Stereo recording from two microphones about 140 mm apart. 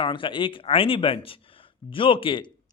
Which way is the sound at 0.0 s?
35° left (ahead or behind).